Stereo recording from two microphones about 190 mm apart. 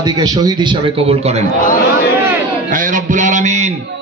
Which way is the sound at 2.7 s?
45° right (ahead or behind).